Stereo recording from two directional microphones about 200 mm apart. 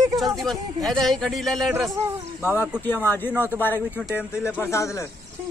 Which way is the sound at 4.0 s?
5° right (ahead or behind).